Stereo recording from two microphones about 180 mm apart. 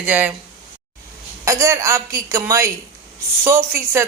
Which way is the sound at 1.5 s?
15° right (ahead or behind).